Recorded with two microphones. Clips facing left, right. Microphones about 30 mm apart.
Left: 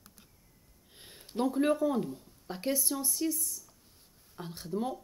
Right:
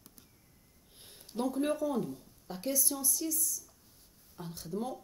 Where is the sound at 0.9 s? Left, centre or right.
Centre.